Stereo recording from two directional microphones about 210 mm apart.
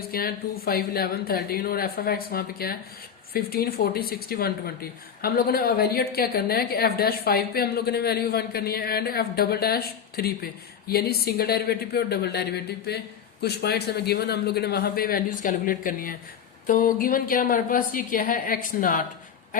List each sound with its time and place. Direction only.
0.1 s a woman's voice: 45° left (ahead or behind)